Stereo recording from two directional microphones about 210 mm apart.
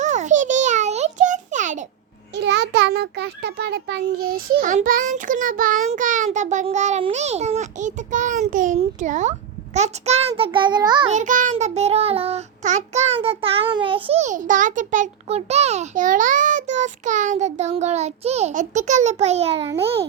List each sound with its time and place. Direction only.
0.0 s a sound: 35° right (ahead or behind)
2.3 s a child's voice: 55° right (ahead or behind); by 11.1 s 20° right (ahead or behind)
11.1 s child singing: 35° right (ahead or behind)
19.8 s a child's voice: 30° right (ahead or behind)